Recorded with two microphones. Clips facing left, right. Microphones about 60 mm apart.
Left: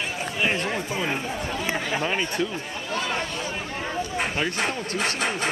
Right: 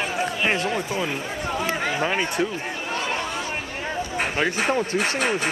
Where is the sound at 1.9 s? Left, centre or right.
Centre.